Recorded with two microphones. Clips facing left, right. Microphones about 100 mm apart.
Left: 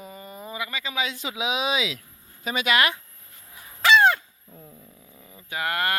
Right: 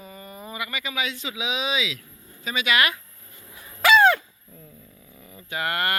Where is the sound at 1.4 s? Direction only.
45° left (ahead or behind).